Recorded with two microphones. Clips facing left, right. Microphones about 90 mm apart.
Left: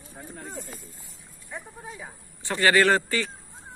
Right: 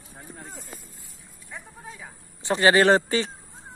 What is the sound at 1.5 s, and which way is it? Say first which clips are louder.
Speech: left 2 dB; 5° left (ahead or behind).